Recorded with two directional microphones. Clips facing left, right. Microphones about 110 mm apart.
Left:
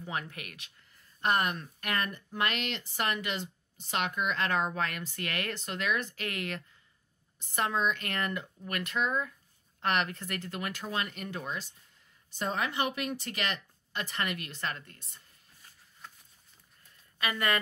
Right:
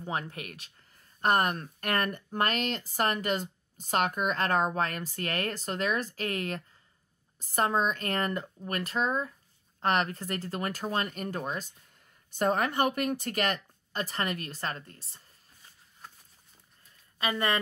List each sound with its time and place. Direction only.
0.0 s speech: 35° right (ahead or behind)
17.2 s speech: 30° right (ahead or behind)